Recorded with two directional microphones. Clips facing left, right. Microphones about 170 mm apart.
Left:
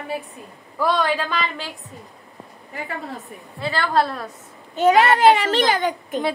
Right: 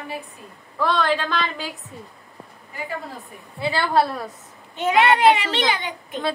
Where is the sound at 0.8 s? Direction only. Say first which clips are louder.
Left 1 dB; 10° left (ahead or behind).